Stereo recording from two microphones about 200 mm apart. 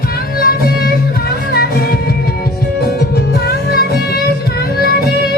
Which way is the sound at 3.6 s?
50° left (ahead or behind).